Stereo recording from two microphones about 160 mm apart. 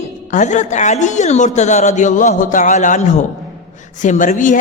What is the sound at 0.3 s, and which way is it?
A woman's voice, 50° left (ahead or behind).